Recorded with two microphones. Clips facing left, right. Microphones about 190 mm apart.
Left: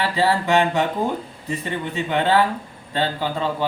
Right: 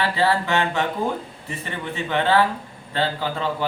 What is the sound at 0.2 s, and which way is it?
Speech, 15° left (ahead or behind).